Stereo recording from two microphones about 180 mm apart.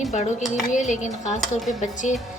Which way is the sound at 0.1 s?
40° left (ahead or behind).